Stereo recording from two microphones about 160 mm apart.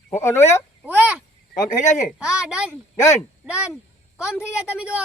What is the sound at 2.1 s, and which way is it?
Speech, 5° right (ahead or behind).